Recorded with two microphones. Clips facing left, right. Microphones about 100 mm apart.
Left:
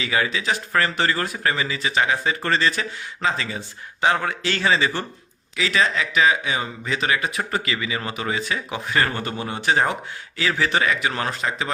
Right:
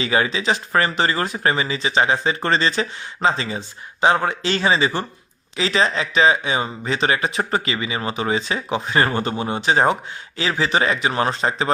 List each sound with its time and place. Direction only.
0.0 s speech: 30° right (ahead or behind)